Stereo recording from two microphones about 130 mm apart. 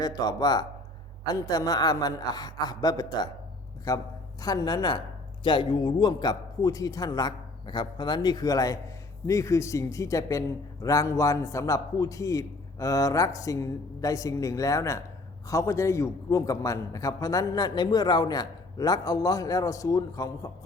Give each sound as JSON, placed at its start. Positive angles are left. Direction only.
{"t": 0.0, "sound": "a man's voice", "side_deg": 30}